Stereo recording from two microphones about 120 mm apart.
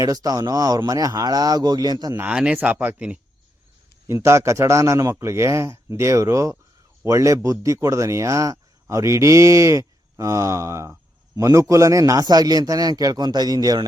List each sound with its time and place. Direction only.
0.0 s a man's voice: 30° right (ahead or behind)
2.1 s speech: 10° right (ahead or behind)
4.0 s a man's voice: 25° right (ahead or behind)